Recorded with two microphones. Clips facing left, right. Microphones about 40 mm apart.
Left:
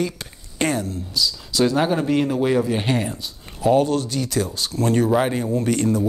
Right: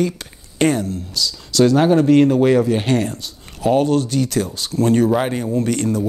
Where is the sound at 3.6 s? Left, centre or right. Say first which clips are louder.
Right 2 dB; right.